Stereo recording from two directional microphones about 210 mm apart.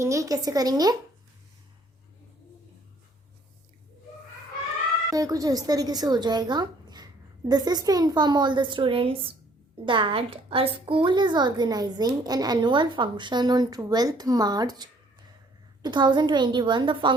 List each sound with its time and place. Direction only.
0.0 s speech: 15° right (ahead or behind)
5.1 s a woman's voice: 15° right (ahead or behind)